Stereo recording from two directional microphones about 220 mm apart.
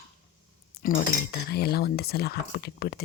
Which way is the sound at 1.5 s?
45° left (ahead or behind).